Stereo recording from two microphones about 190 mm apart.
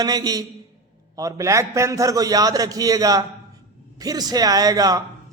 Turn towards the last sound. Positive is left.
turn(degrees=-20)  # may be behind; listen again after turning